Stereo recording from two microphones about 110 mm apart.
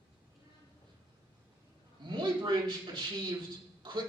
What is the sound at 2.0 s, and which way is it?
Speech, 40° right (ahead or behind).